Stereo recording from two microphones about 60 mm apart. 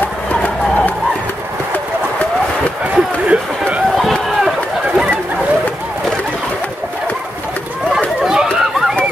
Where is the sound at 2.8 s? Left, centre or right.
Right.